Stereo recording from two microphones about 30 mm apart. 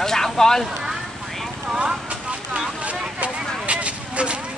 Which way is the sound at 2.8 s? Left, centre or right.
Right.